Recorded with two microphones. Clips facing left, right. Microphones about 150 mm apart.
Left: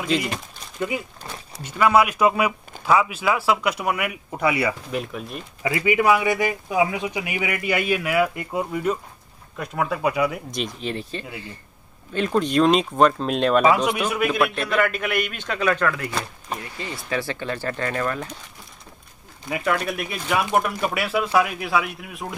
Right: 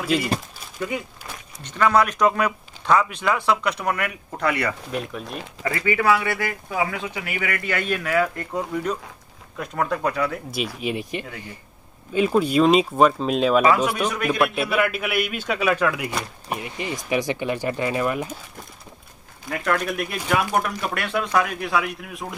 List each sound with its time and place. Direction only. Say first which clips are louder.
0.0 s speech: right 1 dB; 5° right (ahead or behind)
1.6 s speech: left 1 dB; 10° left (ahead or behind)
10.8 s a man's voice: right 2 dB; 10° right (ahead or behind)
19.5 s speech: even; 5° left (ahead or behind)